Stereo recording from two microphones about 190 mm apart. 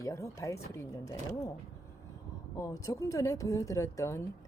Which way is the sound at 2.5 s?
15° left (ahead or behind).